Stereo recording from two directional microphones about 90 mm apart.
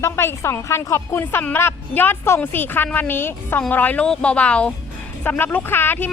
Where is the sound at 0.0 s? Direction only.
30° left (ahead or behind).